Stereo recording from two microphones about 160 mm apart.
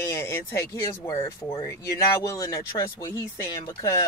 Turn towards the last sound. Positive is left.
turn(degrees=20)  # may be behind; listen again after turning